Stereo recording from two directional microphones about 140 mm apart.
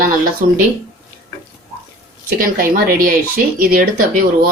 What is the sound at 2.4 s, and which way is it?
Speech, 90° right.